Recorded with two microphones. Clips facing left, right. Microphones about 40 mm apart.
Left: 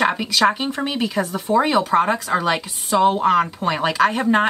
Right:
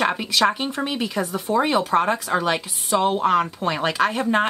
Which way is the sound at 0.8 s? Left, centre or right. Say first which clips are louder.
Left 3 dB; centre.